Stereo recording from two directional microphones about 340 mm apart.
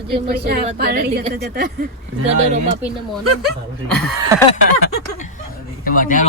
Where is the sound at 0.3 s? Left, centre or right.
Right.